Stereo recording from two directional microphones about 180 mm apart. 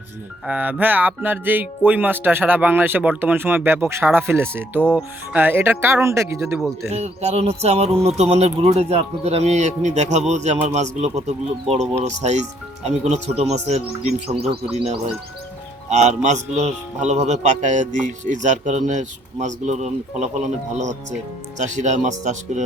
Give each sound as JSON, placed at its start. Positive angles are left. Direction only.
{"t": 0.4, "sound": "speech", "side_deg": -10}
{"t": 6.9, "sound": "speech", "side_deg": -35}